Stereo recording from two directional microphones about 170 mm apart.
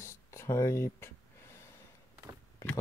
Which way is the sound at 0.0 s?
15° left (ahead or behind).